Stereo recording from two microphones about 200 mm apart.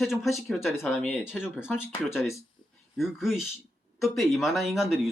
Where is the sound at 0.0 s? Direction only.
Centre (ahead or behind).